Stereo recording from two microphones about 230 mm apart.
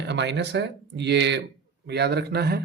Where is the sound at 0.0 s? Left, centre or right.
Right.